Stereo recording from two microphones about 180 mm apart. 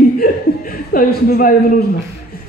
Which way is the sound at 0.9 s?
55° left (ahead or behind).